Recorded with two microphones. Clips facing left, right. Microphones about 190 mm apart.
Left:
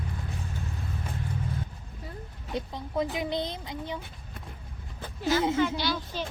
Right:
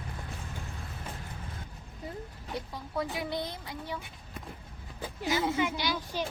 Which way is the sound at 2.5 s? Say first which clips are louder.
Left 5 dB; 20° left (ahead or behind).